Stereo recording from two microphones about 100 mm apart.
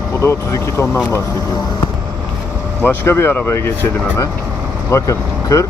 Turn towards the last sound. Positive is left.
turn(degrees=30)  # may be behind; listen again after turning